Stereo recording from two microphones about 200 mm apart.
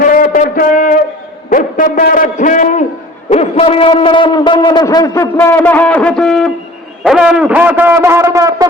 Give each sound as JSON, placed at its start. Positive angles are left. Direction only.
{"t": 0.0, "sound": "music", "side_deg": 45}
{"t": 1.5, "sound": "a man's voice", "side_deg": 45}